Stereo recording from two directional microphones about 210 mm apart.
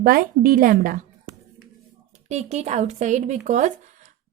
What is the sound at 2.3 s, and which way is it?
Speech, 35° right (ahead or behind).